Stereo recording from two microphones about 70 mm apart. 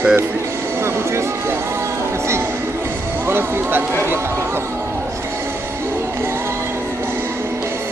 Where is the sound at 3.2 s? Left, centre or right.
Right.